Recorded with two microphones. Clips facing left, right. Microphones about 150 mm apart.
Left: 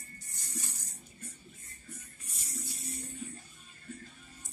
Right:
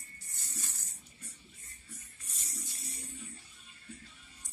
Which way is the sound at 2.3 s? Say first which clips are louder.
Left 1 dB; 10° left (ahead or behind).